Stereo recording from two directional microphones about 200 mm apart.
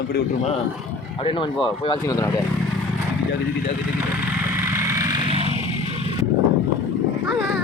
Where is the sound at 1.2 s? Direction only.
25° left (ahead or behind).